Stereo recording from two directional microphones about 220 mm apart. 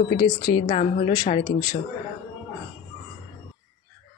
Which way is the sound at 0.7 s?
30° left (ahead or behind).